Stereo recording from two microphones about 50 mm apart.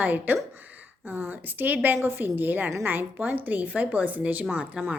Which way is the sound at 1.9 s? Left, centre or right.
Right.